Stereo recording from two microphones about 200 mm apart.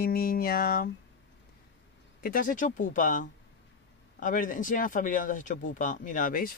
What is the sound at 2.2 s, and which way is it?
Speech, 45° left (ahead or behind).